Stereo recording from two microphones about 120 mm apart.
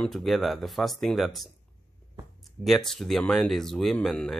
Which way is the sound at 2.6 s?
Centre (ahead or behind).